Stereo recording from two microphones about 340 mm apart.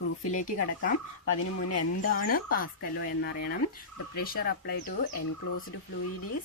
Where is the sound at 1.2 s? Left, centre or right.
Left.